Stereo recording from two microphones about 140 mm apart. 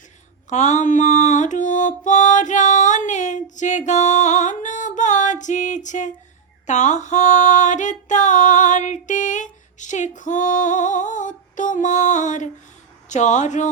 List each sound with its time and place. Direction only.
0.5 s music: 55° left (ahead or behind)
6.7 s female singing: 60° left (ahead or behind)
13.1 s speech: 60° left (ahead or behind)